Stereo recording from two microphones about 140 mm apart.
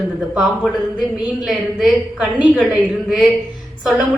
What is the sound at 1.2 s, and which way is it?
A woman's voice, centre (ahead or behind).